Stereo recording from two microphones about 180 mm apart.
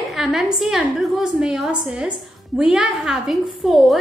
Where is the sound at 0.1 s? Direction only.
Centre (ahead or behind).